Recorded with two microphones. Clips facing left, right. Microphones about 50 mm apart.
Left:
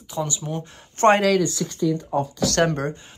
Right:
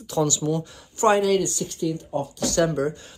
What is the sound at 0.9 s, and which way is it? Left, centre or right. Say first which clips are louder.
Speech: left 3 dB; left.